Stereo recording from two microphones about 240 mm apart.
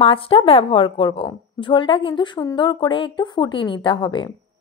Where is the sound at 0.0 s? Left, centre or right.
Left.